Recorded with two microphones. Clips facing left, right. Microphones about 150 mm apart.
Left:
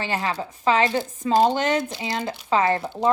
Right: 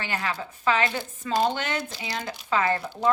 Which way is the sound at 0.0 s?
30° left (ahead or behind).